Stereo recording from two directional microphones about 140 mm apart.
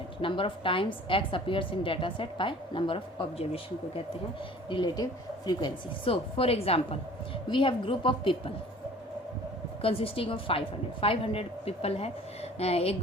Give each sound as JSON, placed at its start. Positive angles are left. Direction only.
{"t": 0.2, "sound": "a woman's voice", "side_deg": 40}
{"t": 9.8, "sound": "a woman's voice", "side_deg": 40}